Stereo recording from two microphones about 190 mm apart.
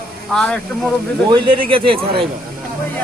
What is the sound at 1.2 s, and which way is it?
Speech, 25° right (ahead or behind).